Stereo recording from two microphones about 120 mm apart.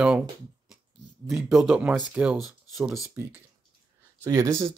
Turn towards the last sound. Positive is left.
turn(degrees=-25)  # may be behind; listen again after turning